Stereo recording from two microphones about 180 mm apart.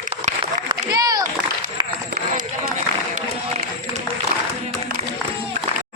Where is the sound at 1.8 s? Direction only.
25° right (ahead or behind).